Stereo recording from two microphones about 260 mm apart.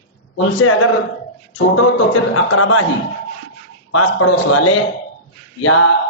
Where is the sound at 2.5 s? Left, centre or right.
Left.